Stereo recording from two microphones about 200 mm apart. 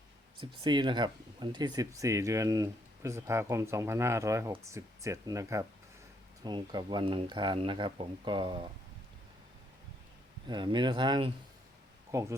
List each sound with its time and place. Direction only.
0.3 s speech: 25° right (ahead or behind)
10.4 s speech: 20° right (ahead or behind)